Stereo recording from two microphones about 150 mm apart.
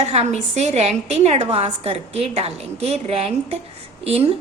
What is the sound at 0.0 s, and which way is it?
A woman's voice, 45° right (ahead or behind).